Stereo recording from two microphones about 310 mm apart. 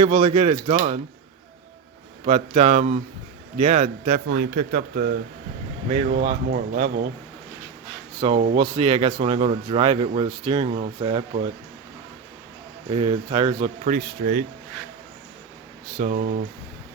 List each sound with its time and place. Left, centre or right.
0.0 s speech: centre
2.2 s speech: right
8.2 s speech: centre
12.9 s speech: centre
16.0 s speech: right